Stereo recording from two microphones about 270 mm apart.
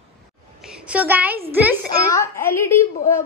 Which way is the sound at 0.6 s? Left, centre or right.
Centre.